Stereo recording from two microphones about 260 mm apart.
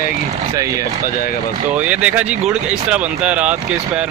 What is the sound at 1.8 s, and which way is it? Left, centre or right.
Speech, centre.